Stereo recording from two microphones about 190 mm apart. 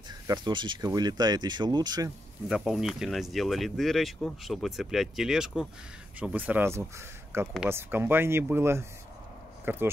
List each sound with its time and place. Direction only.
0.3 s speech: 25° right (ahead or behind)
2.4 s speech: 5° right (ahead or behind)